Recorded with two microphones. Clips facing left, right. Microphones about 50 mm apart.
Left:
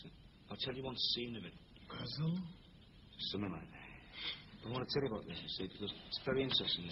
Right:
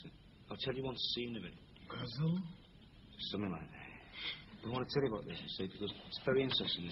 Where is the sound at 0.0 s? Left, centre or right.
Centre.